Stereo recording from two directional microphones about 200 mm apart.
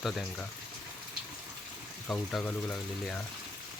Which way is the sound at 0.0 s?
Centre (ahead or behind).